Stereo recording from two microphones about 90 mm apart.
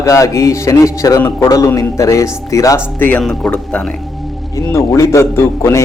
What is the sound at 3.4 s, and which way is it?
Speech, 15° left (ahead or behind).